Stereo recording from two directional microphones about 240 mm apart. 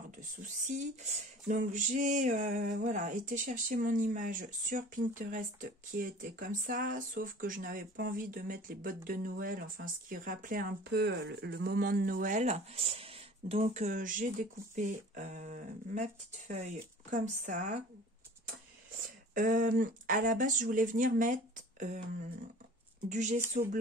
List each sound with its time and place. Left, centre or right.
0.7 s speech: right
19.3 s speech: right
23.0 s a woman's voice: right